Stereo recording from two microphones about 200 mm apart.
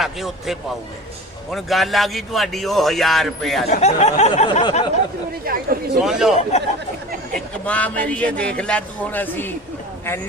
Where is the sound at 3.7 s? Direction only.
35° left (ahead or behind).